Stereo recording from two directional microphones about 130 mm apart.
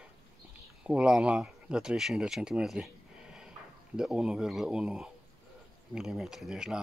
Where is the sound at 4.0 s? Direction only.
5° right (ahead or behind).